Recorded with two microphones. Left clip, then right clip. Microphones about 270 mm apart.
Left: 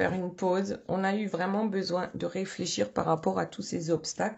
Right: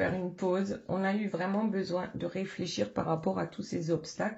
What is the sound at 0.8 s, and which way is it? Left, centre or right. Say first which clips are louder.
Speech: left 3 dB; left.